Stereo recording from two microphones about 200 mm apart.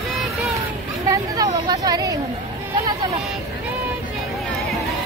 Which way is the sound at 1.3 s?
20° right (ahead or behind).